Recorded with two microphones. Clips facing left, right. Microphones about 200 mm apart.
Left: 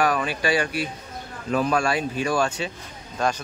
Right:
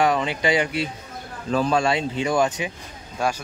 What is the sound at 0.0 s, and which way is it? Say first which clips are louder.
A man's voice: right 2 dB; 25° right (ahead or behind).